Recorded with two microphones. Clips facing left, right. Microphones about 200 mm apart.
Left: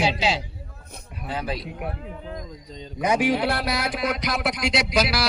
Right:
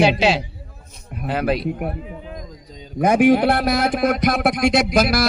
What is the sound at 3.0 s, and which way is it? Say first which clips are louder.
A man's voice: right 7 dB; 55° right (ahead or behind).